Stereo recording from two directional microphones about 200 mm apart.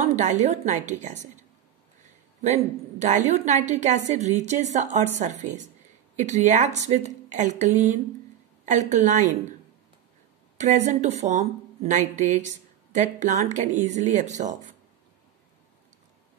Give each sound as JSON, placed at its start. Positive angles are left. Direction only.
{"t": 0.0, "sound": "speech", "side_deg": -35}
{"t": 2.4, "sound": "speech", "side_deg": -35}
{"t": 10.6, "sound": "speech", "side_deg": -35}